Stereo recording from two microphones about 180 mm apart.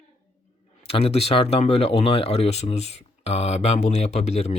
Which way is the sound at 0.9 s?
35° left (ahead or behind).